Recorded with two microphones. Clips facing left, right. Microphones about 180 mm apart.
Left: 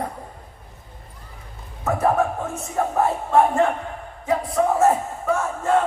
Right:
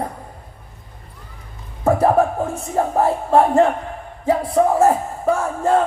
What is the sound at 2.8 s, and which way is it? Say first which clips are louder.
Crowd: right 3 dB; 35° right (ahead or behind).